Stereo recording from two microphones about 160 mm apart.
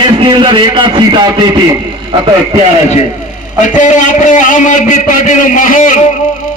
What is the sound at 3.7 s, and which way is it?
A man's voice, 50° left (ahead or behind).